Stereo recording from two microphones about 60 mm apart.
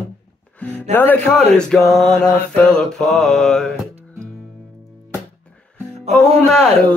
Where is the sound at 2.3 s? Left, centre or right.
Left.